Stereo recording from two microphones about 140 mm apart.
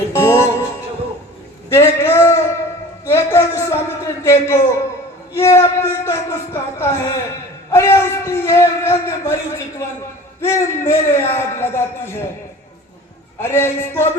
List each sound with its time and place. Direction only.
0.1 s music: 20° left (ahead or behind)
1.7 s a sound: 20° left (ahead or behind)
5.3 s speech: 20° left (ahead or behind)
13.4 s speech: 15° left (ahead or behind)